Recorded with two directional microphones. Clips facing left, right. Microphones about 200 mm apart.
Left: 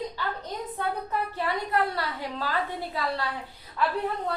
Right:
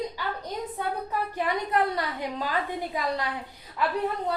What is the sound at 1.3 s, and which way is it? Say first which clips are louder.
A woman's voice: right 2 dB; 15° right (ahead or behind).